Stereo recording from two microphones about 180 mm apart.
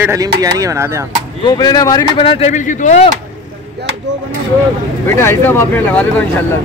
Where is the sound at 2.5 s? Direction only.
45° left (ahead or behind).